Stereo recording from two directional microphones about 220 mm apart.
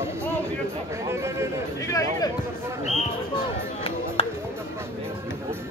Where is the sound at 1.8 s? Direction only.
15° left (ahead or behind).